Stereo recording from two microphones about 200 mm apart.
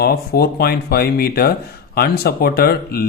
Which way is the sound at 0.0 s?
50° left (ahead or behind).